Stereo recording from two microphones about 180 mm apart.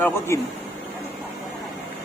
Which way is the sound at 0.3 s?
15° left (ahead or behind).